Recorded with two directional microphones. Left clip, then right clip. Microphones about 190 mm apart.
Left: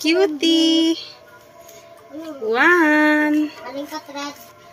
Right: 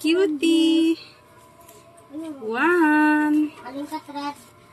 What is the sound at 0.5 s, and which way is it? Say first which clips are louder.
Speech: left 1 dB; 30° right (ahead or behind).